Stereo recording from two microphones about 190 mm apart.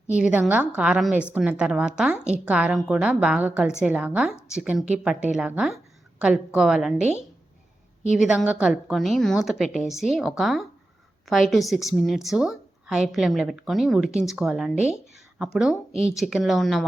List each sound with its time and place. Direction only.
0.1 s a woman's voice: 5° right (ahead or behind)
8.1 s a woman's voice: centre (ahead or behind)
15.9 s speech: 35° right (ahead or behind)
16.1 s a woman's voice: centre (ahead or behind)